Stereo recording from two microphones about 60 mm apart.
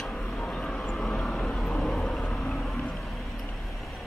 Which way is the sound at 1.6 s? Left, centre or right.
Centre.